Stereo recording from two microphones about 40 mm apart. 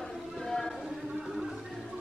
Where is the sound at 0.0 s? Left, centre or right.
Centre.